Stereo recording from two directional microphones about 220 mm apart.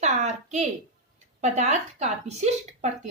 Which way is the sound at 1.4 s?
30° right (ahead or behind).